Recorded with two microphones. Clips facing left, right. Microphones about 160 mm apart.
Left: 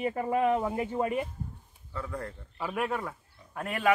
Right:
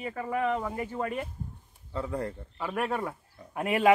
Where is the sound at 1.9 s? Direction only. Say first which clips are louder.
Right 4 dB; 20° right (ahead or behind).